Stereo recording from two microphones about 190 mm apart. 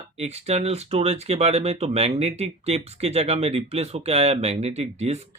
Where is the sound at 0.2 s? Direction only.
35° right (ahead or behind).